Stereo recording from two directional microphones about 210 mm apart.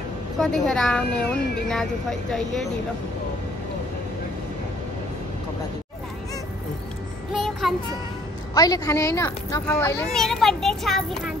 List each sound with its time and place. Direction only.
0.4 s speech: 5° left (ahead or behind)
7.3 s child singing: centre (ahead or behind)
8.5 s speech: 15° left (ahead or behind)
10.1 s speech: centre (ahead or behind)